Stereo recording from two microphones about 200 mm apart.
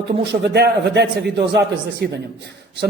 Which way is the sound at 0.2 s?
60° right (ahead or behind).